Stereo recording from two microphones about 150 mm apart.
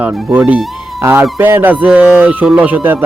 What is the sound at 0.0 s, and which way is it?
Speech, 10° right (ahead or behind).